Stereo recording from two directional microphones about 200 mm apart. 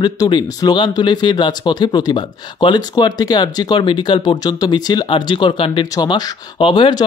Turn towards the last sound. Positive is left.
turn(degrees=25)  # may be behind; listen again after turning